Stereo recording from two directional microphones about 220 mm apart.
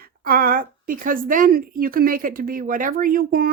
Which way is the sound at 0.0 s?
40° right (ahead or behind).